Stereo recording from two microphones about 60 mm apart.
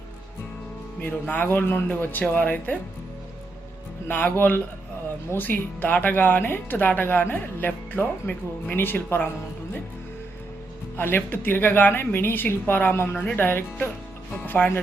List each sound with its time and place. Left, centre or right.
0.9 s speech: left
4.1 s speech: left
10.9 s speech: left